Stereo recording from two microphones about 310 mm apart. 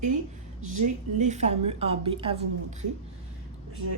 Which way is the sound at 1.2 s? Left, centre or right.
Right.